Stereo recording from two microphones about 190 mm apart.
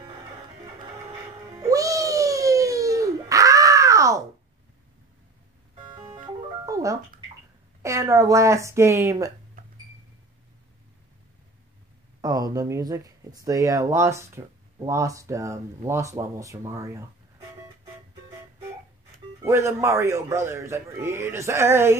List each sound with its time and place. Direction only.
1.6 s cat: 20° right (ahead or behind)
5.9 s music: 20° right (ahead or behind)
7.8 s a woman's voice: 15° right (ahead or behind)
12.2 s speech: 20° right (ahead or behind)
19.4 s speech: 15° right (ahead or behind)